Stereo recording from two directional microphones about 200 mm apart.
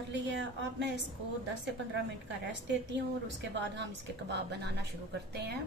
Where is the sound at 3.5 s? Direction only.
60° right (ahead or behind).